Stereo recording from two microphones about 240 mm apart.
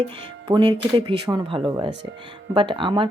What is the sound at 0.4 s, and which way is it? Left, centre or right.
Speech, centre.